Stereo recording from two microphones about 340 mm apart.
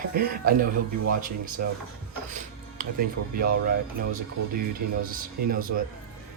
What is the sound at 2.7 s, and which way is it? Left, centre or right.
Speech, right.